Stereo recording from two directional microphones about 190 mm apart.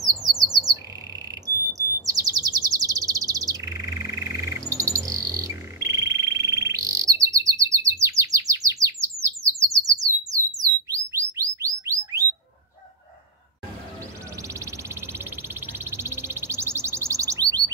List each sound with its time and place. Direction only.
0.0 s squawk: 20° right (ahead or behind)
1.4 s chirp: 20° right (ahead or behind)
14.5 s a sound: 15° right (ahead or behind)